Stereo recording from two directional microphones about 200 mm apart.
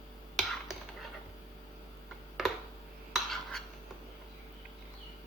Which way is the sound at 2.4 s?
Centre (ahead or behind).